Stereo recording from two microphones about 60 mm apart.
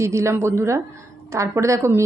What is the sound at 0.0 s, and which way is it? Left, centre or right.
A woman's voice, right.